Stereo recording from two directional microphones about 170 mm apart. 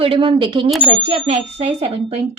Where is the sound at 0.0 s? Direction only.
30° right (ahead or behind).